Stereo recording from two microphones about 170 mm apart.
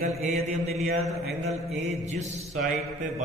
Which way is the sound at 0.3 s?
40° right (ahead or behind).